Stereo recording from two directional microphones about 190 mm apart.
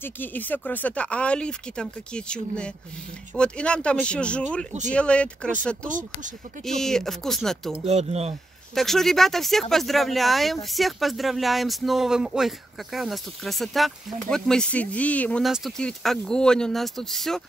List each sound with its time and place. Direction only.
0.0 s speech: 10° left (ahead or behind)
5.9 s speech: 45° right (ahead or behind)
6.6 s speech: centre (ahead or behind)
7.8 s speech: 35° right (ahead or behind)
8.7 s speech: centre (ahead or behind)